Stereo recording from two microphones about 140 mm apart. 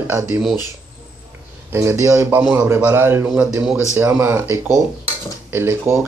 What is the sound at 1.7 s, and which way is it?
Speech, 20° right (ahead or behind).